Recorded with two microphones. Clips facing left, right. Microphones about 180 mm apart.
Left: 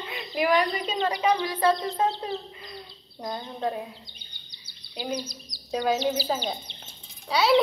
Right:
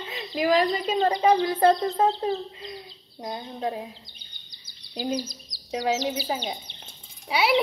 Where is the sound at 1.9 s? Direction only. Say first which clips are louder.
Right 4 dB; 35° right (ahead or behind).